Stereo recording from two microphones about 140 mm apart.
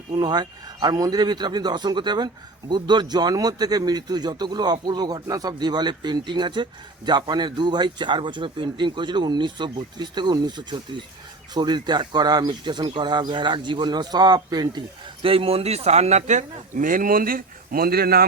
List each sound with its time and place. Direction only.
0.1 s a man's voice: 30° right (ahead or behind); by 18.3 s 90° right